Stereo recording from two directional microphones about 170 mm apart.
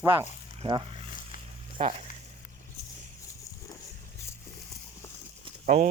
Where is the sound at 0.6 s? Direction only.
40° right (ahead or behind).